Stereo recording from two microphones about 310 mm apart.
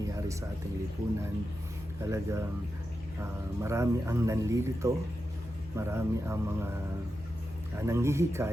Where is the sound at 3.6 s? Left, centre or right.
Centre.